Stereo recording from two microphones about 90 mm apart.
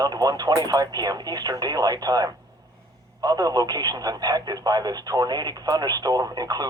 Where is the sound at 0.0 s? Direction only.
45° right (ahead or behind).